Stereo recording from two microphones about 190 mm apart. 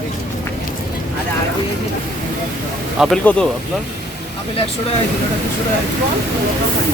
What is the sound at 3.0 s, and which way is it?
Speech, 5° left (ahead or behind).